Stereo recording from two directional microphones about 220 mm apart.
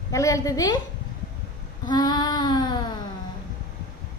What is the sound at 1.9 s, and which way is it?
Child singing, 20° left (ahead or behind).